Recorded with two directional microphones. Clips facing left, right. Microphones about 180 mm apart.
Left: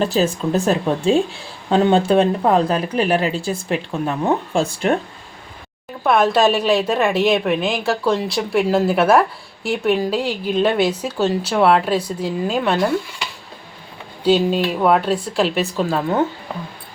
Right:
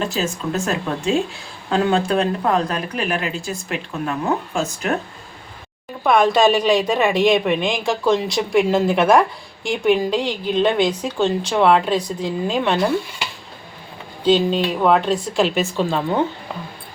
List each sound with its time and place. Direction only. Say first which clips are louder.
0.0 s speech: left 5 dB; 35° left (ahead or behind)
4.5 s speech: left 4 dB; 30° left (ahead or behind)
6.0 s speech: even; 5° left (ahead or behind)
14.3 s speech: left 1 dB; 10° left (ahead or behind)